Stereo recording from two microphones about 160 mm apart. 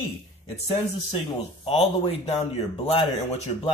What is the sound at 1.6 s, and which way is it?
Speech, 35° left (ahead or behind).